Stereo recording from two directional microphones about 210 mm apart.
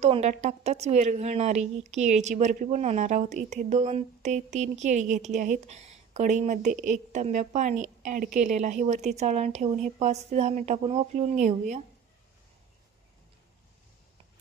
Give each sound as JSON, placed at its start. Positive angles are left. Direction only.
{"t": 0.0, "sound": "a woman's voice", "side_deg": -30}